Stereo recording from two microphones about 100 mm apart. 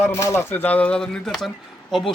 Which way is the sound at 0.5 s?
15° left (ahead or behind).